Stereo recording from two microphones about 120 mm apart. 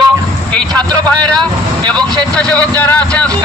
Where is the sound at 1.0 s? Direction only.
10° left (ahead or behind).